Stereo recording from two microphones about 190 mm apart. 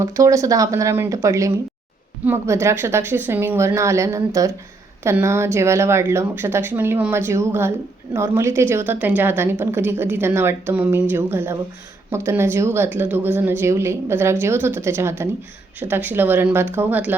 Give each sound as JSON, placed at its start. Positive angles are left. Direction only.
{"t": 0.0, "sound": "a woman's voice", "side_deg": -15}